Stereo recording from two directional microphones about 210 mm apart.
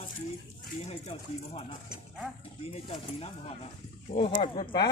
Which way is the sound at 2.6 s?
25° left (ahead or behind).